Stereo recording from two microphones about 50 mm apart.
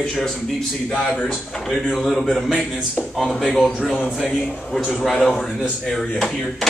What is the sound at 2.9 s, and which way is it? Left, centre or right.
A man's voice, centre.